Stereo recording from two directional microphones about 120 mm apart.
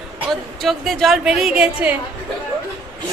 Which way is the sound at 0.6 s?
Centre (ahead or behind).